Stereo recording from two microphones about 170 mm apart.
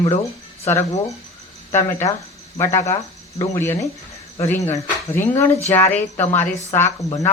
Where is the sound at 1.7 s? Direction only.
15° left (ahead or behind).